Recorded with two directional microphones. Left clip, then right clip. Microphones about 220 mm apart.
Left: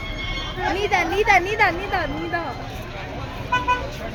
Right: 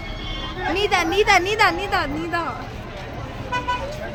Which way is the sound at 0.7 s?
50° right (ahead or behind).